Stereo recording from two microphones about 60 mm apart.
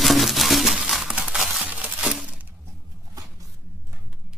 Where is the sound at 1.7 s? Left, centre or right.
Right.